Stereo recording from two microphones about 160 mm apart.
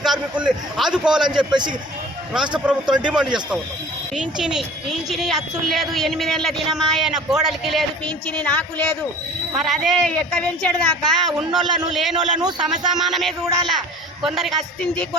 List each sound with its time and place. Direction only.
0.0 s speech: 5° right (ahead or behind)
2.6 s speech: 5° right (ahead or behind)